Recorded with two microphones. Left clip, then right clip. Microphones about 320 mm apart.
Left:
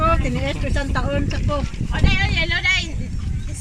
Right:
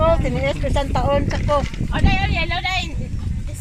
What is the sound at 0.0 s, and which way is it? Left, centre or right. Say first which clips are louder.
Speech: right 2 dB; right.